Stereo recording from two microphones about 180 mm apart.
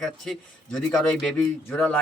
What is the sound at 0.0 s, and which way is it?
A man's voice, 5° left (ahead or behind).